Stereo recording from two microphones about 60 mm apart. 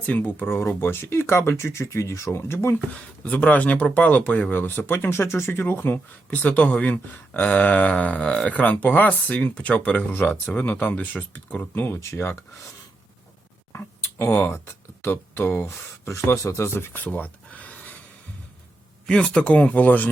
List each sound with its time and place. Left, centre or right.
0.0 s speech: left
2.7 s speech: left
6.4 s speech: left
10.1 s speech: left
11.7 s speech: left
13.7 s a sound: left
15.0 s speech: left
15.6 s speech: left
17.0 s a sound: left
19.0 s speech: centre